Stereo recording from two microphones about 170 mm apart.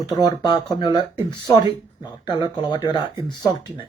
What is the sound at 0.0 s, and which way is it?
Speech, 20° left (ahead or behind).